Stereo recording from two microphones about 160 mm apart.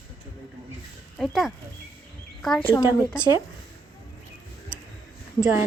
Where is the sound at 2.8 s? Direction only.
15° left (ahead or behind).